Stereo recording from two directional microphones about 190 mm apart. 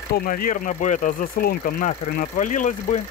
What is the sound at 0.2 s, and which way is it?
Speech, 45° left (ahead or behind).